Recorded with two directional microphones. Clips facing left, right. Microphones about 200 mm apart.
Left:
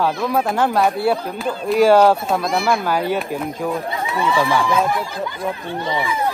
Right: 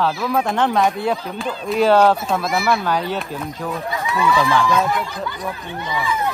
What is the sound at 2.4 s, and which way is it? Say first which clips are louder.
Speech: even; 5° right (ahead or behind).